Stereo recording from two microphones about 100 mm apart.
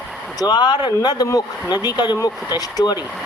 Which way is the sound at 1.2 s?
35° left (ahead or behind).